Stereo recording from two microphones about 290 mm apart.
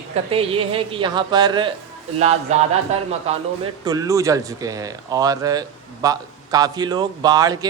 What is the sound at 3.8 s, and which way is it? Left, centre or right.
Speech, centre.